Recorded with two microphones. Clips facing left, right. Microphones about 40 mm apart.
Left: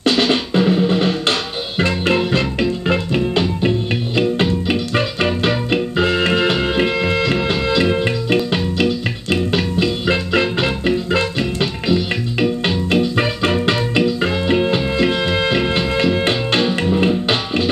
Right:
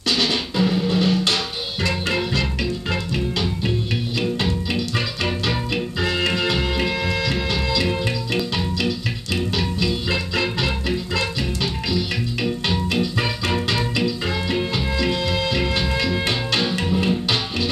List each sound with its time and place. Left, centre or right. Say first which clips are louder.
0.0 s music: left 6 dB; left